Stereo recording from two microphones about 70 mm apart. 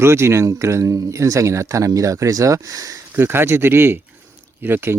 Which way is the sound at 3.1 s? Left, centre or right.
Right.